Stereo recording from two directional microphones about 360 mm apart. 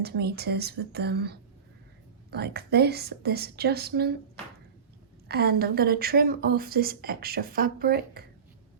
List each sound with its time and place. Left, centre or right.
0.0 s a woman's voice: right
5.3 s a woman's voice: right